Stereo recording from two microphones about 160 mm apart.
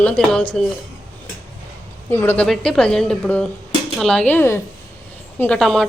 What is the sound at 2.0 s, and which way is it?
A woman's voice, 15° left (ahead or behind).